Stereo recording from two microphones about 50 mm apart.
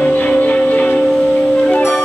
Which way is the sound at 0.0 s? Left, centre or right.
Left.